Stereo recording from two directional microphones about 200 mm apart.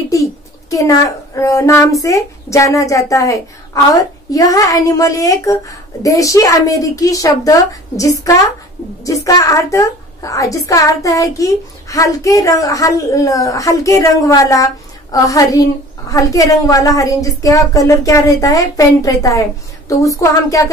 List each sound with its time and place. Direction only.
0.1 s a woman's voice: 15° left (ahead or behind)